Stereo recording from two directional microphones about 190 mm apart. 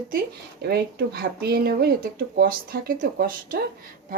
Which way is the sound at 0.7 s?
55° right (ahead or behind).